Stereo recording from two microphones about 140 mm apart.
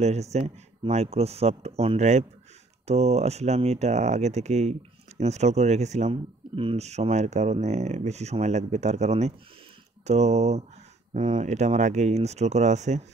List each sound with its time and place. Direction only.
0.0 s speech: 50° right (ahead or behind)